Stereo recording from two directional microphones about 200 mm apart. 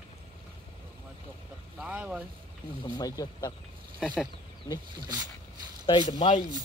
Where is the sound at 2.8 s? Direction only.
20° left (ahead or behind).